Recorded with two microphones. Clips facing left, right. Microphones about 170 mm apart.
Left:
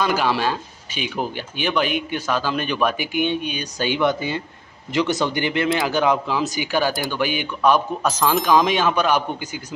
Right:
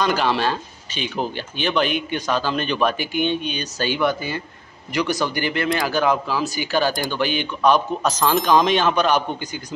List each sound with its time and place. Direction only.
0.0 s speech: 5° left (ahead or behind)